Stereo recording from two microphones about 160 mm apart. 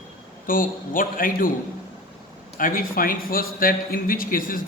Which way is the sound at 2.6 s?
60° left (ahead or behind).